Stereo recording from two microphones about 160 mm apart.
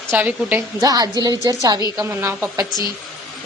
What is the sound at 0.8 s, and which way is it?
A woman's voice, 20° right (ahead or behind).